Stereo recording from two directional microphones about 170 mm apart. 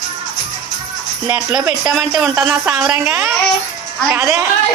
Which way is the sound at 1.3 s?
10° right (ahead or behind).